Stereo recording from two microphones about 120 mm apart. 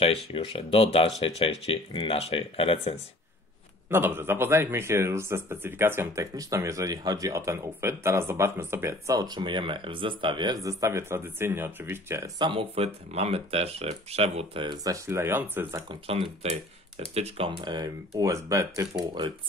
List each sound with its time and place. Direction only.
0.0 s speech: 50° left (ahead or behind)
3.9 s a man's voice: 20° right (ahead or behind); by 10.6 s 40° right (ahead or behind)
10.6 s a man's voice: 25° right (ahead or behind)
12.4 s speech: 45° right (ahead or behind)
14.8 s a man's voice: 25° right (ahead or behind)
16.1 s speech: 55° right (ahead or behind)
17.5 s speech: 40° right (ahead or behind)